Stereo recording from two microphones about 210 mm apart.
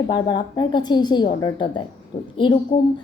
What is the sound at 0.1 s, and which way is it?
A woman's voice, 20° left (ahead or behind).